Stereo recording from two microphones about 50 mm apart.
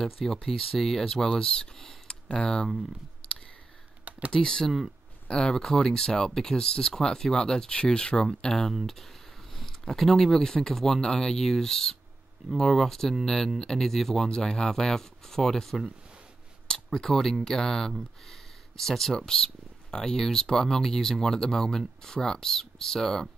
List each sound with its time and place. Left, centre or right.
0.0 s speech: centre
1.4 s speech: centre
4.3 s speech: centre